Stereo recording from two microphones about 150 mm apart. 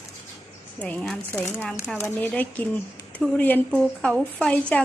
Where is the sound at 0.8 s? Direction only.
5° left (ahead or behind).